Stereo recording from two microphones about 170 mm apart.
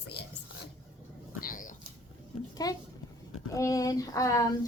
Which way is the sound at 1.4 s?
55° left (ahead or behind).